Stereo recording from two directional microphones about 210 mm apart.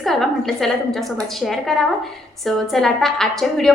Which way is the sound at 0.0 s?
Centre (ahead or behind).